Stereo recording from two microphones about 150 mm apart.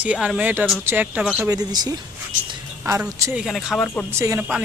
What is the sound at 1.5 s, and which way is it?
Speech, 25° right (ahead or behind).